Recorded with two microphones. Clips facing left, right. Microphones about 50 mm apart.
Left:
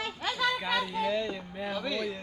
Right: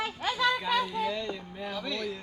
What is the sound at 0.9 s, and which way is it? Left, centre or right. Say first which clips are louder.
Speech: left 1 dB; centre.